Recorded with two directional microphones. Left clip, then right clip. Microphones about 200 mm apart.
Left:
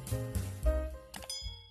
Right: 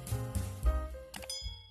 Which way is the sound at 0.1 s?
Centre (ahead or behind).